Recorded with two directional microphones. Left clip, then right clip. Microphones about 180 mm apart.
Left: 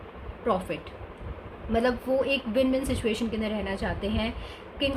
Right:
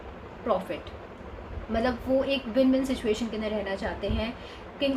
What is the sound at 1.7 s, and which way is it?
A woman's voice, 50° left (ahead or behind).